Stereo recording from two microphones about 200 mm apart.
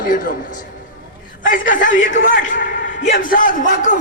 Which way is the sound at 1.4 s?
45° left (ahead or behind).